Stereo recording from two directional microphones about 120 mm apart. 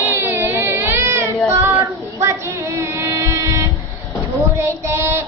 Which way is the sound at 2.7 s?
25° right (ahead or behind).